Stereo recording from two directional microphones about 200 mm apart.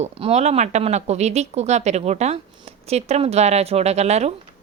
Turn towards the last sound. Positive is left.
turn(degrees=-35)  # may be behind; listen again after turning